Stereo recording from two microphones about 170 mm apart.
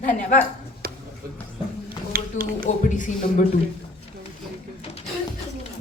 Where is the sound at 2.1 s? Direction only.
60° right (ahead or behind).